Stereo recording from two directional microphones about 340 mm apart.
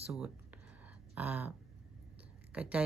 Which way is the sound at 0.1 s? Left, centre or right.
Centre.